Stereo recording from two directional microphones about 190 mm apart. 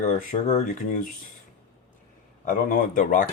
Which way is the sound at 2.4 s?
45° left (ahead or behind).